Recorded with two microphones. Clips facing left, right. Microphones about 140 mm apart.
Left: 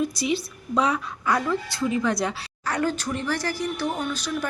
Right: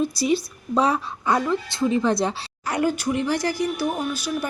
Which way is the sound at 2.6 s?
10° right (ahead or behind).